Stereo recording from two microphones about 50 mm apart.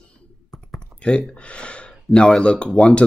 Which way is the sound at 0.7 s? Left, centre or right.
Centre.